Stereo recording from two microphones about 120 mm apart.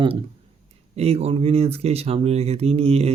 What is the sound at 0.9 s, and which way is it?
Speech, 55° right (ahead or behind).